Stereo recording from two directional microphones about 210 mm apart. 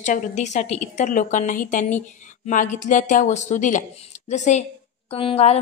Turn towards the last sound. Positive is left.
turn(degrees=30)  # may be behind; listen again after turning